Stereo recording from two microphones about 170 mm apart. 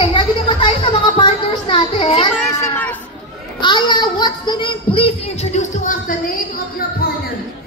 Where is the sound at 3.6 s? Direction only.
25° left (ahead or behind); by 6.4 s 55° left (ahead or behind).